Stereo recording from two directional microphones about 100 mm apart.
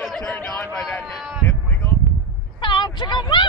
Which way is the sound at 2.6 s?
50° left (ahead or behind).